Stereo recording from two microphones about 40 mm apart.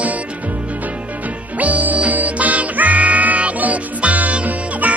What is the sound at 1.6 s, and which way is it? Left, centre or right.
Music, right.